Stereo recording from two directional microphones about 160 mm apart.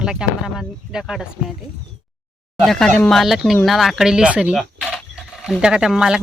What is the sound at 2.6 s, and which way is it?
Speech, centre (ahead or behind).